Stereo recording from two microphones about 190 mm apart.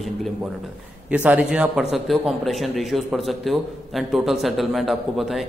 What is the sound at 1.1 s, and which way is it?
A man's voice, 5° right (ahead or behind).